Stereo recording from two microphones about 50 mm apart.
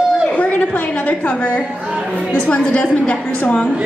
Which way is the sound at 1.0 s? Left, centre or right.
Left.